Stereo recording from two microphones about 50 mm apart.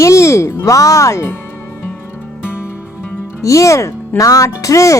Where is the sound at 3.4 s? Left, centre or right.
Left.